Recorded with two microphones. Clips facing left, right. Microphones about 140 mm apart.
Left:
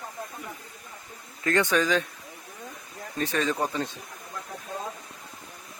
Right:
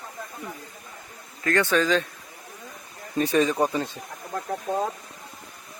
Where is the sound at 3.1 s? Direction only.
15° right (ahead or behind).